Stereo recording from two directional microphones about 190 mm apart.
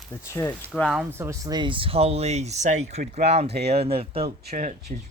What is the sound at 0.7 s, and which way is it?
Speech, centre (ahead or behind).